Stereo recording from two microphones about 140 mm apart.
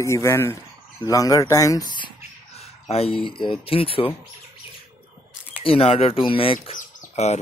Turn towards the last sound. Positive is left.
turn(degrees=50)  # may be behind; listen again after turning